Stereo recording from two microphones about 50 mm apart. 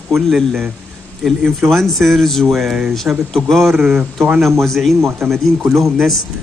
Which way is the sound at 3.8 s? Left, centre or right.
Right.